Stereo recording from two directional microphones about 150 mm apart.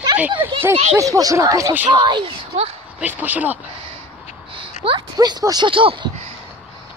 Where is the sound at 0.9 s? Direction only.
20° right (ahead or behind).